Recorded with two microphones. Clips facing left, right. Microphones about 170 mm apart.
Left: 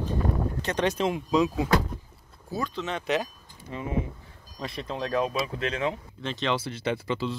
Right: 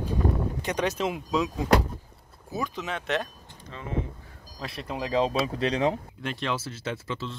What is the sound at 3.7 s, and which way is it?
Speech, 15° left (ahead or behind).